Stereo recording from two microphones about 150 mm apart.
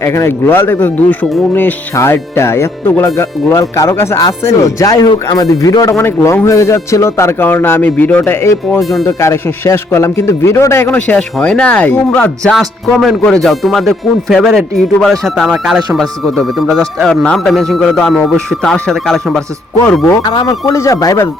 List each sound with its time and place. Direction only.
0.0 s speech: 20° left (ahead or behind)
8.8 s speech: centre (ahead or behind)
9.0 s speech: 20° left (ahead or behind); by 19.4 s 5° left (ahead or behind)
20.3 s speech: 30° left (ahead or behind)